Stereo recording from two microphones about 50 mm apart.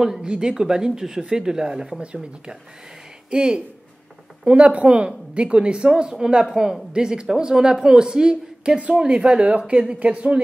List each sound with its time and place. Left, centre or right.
0.0 s a woman's voice: centre
3.3 s a woman's voice: centre